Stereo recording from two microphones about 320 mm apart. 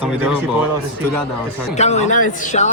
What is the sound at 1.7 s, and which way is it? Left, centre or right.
A man's voice, left.